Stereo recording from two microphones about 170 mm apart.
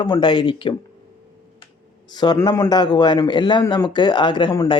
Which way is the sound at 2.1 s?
25° left (ahead or behind).